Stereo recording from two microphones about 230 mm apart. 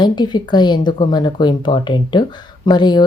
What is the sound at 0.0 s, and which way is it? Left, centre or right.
Speech, centre.